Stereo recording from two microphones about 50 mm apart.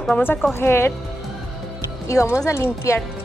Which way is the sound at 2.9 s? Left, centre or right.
Left.